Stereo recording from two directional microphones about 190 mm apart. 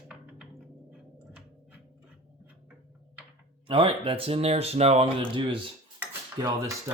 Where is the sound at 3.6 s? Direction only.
30° right (ahead or behind).